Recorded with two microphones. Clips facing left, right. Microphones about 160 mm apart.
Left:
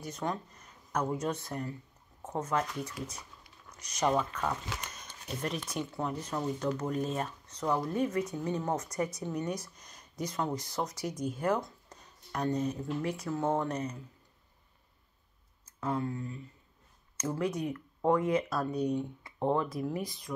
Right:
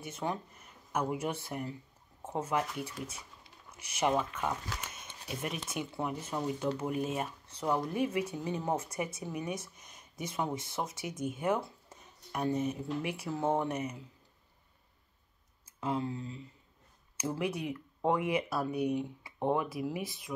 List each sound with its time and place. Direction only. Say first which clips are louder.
0.2 s speech: even; 10° right (ahead or behind)
15.8 s speech: left 1 dB; 15° right (ahead or behind)